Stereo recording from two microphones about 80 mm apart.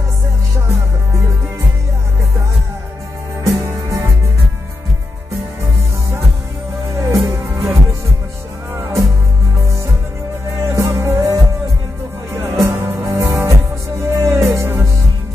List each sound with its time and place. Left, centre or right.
3.4 s music: right
6.9 s music: right
10.5 s music: right